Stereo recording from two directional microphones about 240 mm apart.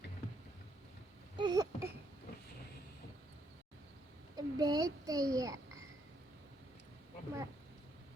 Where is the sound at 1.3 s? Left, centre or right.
Centre.